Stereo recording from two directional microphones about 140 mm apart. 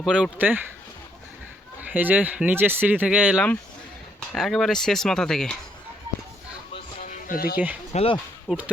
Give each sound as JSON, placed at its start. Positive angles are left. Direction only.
{"t": 0.0, "sound": "speech", "side_deg": -5}
{"t": 1.9, "sound": "speech", "side_deg": -10}
{"t": 4.3, "sound": "speech", "side_deg": 0}
{"t": 7.0, "sound": "music", "side_deg": 70}
{"t": 7.9, "sound": "speech", "side_deg": 40}
{"t": 8.4, "sound": "speech", "side_deg": -10}